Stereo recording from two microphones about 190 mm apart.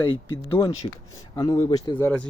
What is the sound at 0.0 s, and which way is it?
Speech, 25° left (ahead or behind).